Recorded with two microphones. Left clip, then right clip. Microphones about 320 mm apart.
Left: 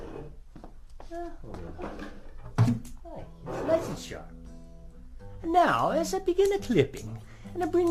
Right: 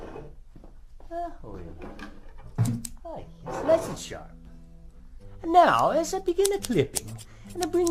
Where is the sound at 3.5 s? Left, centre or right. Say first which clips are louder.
Right 4 dB; centre.